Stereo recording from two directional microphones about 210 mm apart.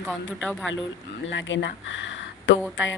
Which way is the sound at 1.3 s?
60° left (ahead or behind).